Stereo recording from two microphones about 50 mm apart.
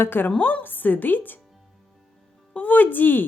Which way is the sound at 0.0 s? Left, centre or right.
Left.